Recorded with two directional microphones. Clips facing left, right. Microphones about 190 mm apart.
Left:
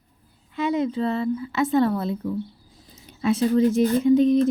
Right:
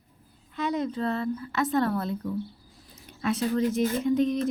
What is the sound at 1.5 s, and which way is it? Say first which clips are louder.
Speech: left 5 dB; 25° left (ahead or behind).